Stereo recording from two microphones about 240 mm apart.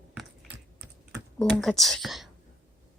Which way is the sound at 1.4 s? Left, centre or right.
Centre.